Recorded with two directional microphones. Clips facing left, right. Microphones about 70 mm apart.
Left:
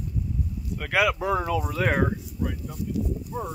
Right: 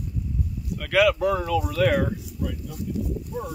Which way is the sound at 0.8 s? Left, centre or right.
Centre.